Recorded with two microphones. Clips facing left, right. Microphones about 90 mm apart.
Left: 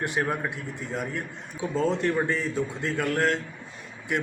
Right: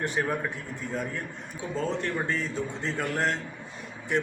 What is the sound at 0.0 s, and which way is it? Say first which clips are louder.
Speech: left 1 dB; 10° left (ahead or behind).